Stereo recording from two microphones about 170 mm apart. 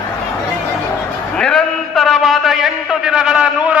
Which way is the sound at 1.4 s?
5° left (ahead or behind).